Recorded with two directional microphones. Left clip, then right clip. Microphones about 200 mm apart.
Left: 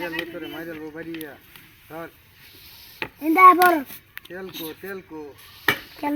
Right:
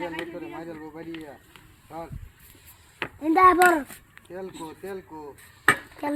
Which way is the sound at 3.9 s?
5° right (ahead or behind).